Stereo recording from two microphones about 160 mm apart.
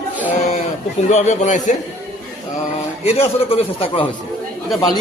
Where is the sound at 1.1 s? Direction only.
45° left (ahead or behind).